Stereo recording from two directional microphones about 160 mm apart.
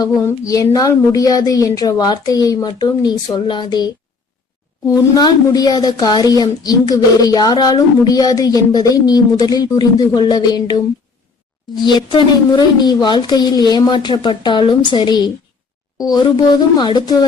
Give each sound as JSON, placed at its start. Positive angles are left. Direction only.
{"t": 0.0, "sound": "speech", "side_deg": 20}
{"t": 4.9, "sound": "speech", "side_deg": 20}